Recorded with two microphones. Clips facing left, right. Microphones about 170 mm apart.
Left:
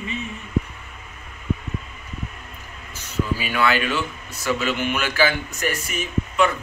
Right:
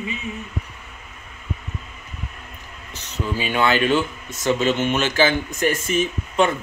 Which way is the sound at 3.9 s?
45° right (ahead or behind).